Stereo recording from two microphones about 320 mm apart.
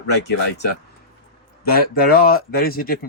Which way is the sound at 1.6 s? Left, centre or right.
Left.